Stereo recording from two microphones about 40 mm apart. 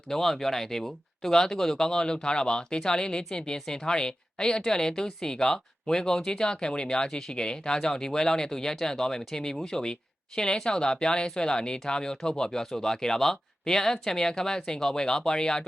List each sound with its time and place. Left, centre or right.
0.1 s speech: centre